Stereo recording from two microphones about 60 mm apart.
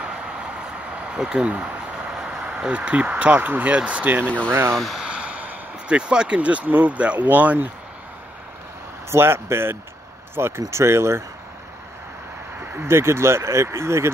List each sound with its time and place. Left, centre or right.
0.0 s a sound: centre
1.5 s speech: centre
4.3 s speech: left
4.9 s speech: centre
9.1 s speech: right
12.5 s speech: right